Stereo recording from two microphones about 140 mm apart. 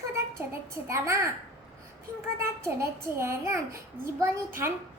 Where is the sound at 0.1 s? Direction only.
20° right (ahead or behind).